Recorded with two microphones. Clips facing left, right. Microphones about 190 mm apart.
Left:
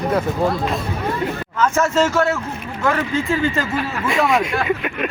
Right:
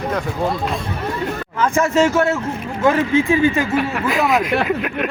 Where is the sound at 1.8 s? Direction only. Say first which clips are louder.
Right 3 dB; 15° right (ahead or behind).